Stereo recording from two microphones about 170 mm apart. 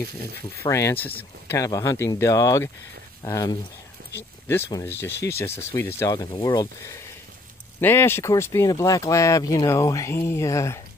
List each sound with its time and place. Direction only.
0.6 s speech: 15° left (ahead or behind)
4.0 s a sound: 90° right
4.8 s speech: 15° left (ahead or behind)